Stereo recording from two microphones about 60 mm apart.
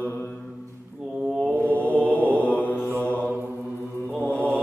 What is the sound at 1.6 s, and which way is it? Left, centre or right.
Mantra, left.